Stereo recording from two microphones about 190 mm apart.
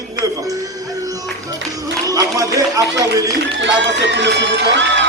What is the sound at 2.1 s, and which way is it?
Speech, 20° right (ahead or behind).